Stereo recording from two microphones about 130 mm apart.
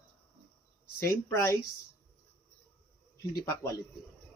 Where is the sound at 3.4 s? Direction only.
20° left (ahead or behind).